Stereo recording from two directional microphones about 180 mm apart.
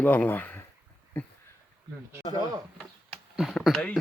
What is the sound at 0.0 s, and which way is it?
Speech, 10° left (ahead or behind).